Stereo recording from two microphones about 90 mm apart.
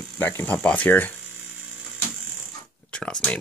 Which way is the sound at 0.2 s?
20° left (ahead or behind).